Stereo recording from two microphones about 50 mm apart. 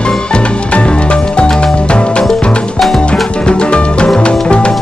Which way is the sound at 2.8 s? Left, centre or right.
Centre.